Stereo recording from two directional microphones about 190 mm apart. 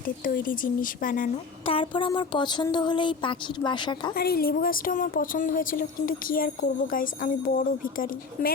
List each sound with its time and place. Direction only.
0.3 s a woman's voice: 45° left (ahead or behind)
1.6 s speech: 30° left (ahead or behind)
4.1 s a woman's voice: 55° left (ahead or behind)